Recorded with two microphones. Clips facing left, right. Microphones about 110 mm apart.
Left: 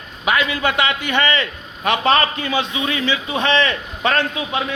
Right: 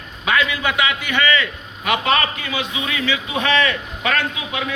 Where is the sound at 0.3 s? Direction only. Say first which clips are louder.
Left 1 dB; 25° left (ahead or behind).